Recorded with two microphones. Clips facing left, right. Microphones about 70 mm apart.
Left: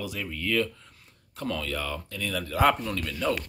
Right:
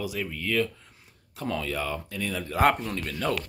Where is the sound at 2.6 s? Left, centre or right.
Right.